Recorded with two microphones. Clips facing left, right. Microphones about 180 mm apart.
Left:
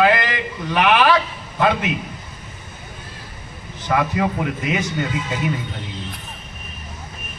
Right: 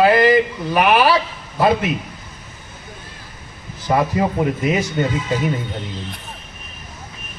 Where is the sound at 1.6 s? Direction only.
35° right (ahead or behind).